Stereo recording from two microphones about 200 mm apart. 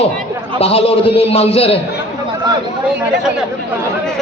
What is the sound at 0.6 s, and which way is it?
A man's voice, 30° left (ahead or behind).